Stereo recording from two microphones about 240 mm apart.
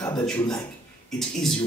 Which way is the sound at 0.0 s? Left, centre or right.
Centre.